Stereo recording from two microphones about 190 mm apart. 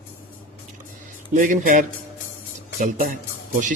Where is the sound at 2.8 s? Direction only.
45° right (ahead or behind).